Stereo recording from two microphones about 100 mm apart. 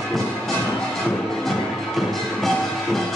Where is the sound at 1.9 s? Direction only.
Centre (ahead or behind).